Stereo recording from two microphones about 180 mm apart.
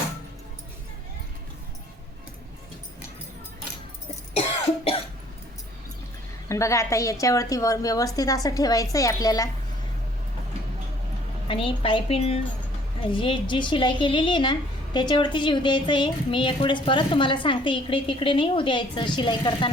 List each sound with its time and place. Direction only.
6.5 s a woman's voice: 15° left (ahead or behind)
11.4 s a woman's voice: 30° left (ahead or behind)